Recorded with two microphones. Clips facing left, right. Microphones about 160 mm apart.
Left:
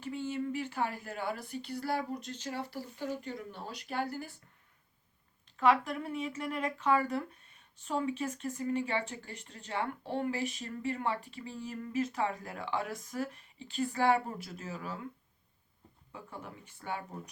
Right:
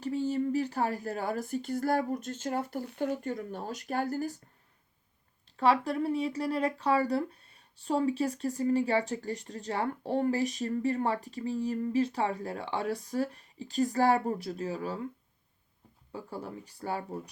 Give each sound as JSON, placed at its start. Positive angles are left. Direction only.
{"t": 0.0, "sound": "speech", "side_deg": -40}
{"t": 5.5, "sound": "speech", "side_deg": -35}
{"t": 16.1, "sound": "speech", "side_deg": -35}